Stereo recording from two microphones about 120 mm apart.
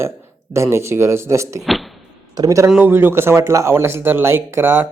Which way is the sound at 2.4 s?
30° right (ahead or behind).